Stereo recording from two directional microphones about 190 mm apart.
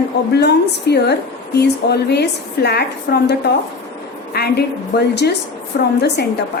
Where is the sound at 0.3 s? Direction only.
60° left (ahead or behind).